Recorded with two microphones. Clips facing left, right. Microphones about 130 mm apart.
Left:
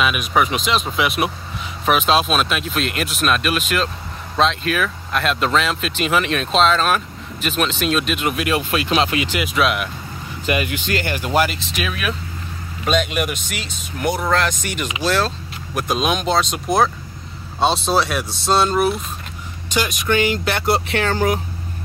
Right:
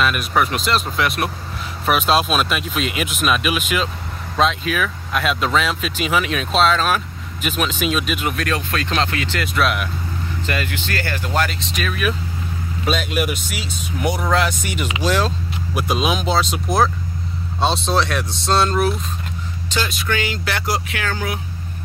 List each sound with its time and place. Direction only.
0.0 s speech: 5° left (ahead or behind)
8.4 s speech: 15° left (ahead or behind)
9.5 s speech: centre (ahead or behind)
10.4 s speech: 15° left (ahead or behind)
19.7 s speech: 15° left (ahead or behind); by 21.4 s 35° left (ahead or behind)